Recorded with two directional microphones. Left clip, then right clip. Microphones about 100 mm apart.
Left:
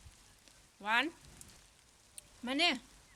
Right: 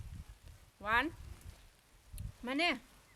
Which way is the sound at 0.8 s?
20° right (ahead or behind).